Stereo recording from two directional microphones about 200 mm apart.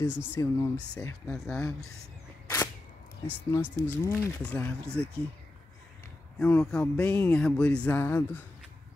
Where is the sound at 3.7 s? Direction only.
10° left (ahead or behind).